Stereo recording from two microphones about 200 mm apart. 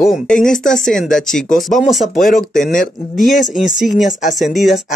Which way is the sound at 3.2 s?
Centre (ahead or behind).